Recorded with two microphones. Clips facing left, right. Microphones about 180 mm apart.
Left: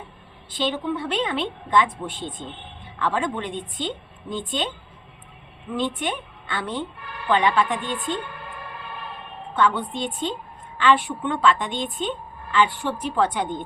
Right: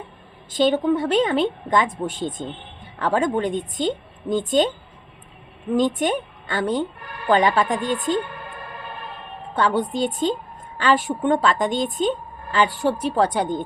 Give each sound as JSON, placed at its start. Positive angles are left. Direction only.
{"t": 0.5, "sound": "a woman's voice", "side_deg": -45}
{"t": 5.7, "sound": "a woman's voice", "side_deg": -40}
{"t": 9.6, "sound": "a woman's voice", "side_deg": -35}